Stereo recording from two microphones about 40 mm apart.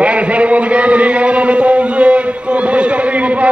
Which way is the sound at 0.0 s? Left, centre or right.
Right.